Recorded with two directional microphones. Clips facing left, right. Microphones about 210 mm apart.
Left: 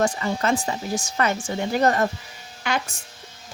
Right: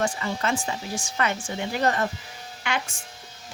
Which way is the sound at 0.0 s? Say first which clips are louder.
Left 4 dB; 40° left (ahead or behind).